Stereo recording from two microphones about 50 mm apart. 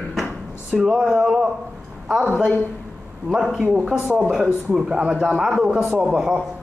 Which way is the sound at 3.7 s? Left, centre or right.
Centre.